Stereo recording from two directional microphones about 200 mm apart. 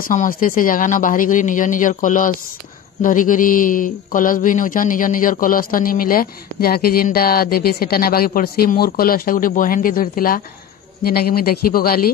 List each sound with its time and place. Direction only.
0.1 s speech: 40° left (ahead or behind)